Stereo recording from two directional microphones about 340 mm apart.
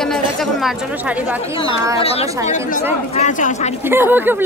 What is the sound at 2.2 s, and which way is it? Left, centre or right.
Speech, centre.